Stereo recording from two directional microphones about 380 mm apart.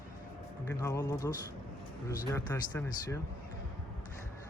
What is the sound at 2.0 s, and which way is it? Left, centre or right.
Speech, centre.